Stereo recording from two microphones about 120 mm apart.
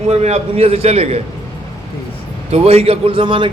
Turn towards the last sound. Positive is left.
turn(degrees=-45)  # may be behind; listen again after turning